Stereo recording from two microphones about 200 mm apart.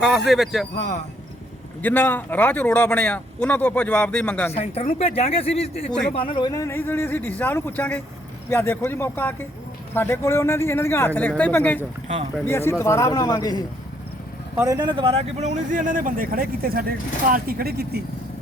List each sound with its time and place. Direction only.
0.0 s speech: centre (ahead or behind)
1.8 s speech: 10° left (ahead or behind)
4.5 s speech: 30° left (ahead or behind)
14.5 s speech: 15° right (ahead or behind); by 18.0 s 50° right (ahead or behind)